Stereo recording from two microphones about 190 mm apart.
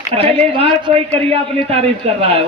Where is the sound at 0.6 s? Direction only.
30° right (ahead or behind).